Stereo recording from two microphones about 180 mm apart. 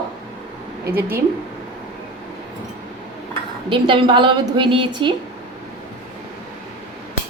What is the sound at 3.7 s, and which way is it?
A woman's voice, 30° right (ahead or behind).